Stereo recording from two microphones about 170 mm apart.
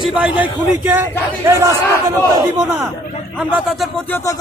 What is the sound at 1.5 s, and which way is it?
Speech, 15° right (ahead or behind).